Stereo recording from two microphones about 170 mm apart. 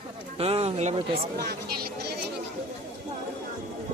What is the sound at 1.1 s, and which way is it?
Speech, 70° right (ahead or behind).